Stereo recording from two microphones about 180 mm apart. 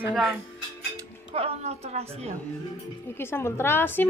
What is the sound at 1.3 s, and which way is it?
A woman's voice, 35° right (ahead or behind).